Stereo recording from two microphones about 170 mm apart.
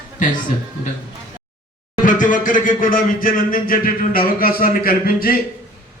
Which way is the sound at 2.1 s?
50° left (ahead or behind).